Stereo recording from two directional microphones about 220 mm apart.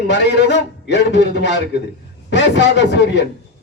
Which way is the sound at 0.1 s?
50° left (ahead or behind).